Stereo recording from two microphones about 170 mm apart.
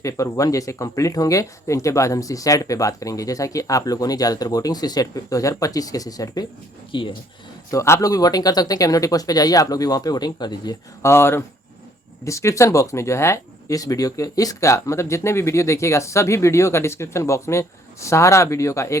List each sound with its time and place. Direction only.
0.0 s speech: 20° left (ahead or behind)
7.7 s speech: 15° left (ahead or behind)